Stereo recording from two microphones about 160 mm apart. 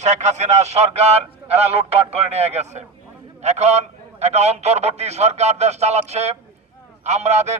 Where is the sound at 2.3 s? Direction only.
45° right (ahead or behind).